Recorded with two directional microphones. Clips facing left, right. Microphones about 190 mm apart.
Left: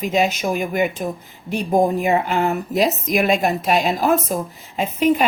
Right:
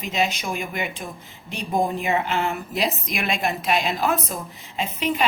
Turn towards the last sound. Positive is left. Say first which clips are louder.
# left 8 dB
turn(degrees=45)  # may be behind; listen again after turning